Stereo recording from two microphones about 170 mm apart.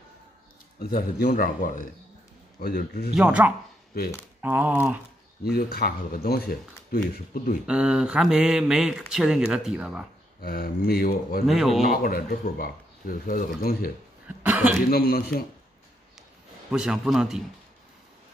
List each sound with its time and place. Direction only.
0.7 s speech: 60° left (ahead or behind)
2.6 s speech: 65° left (ahead or behind)
3.2 s speech: 5° right (ahead or behind)
5.4 s speech: 65° left (ahead or behind)
7.6 s speech: 5° right (ahead or behind)
10.4 s speech: 60° left (ahead or behind)
11.4 s speech: centre (ahead or behind)
11.9 s speech: 60° left (ahead or behind)
14.2 s cough: 10° right (ahead or behind)
14.9 s speech: 60° left (ahead or behind)
16.7 s speech: 5° right (ahead or behind)